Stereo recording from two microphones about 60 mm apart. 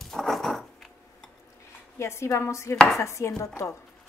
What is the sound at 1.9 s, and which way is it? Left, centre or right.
Speech, left.